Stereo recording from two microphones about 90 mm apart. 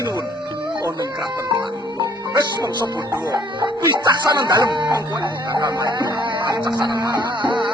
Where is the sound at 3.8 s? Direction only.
50° right (ahead or behind).